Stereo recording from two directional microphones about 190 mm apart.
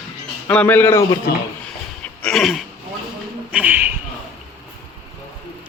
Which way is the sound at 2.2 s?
5° left (ahead or behind).